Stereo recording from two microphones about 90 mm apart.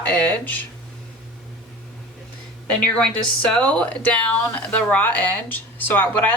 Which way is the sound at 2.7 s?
15° left (ahead or behind).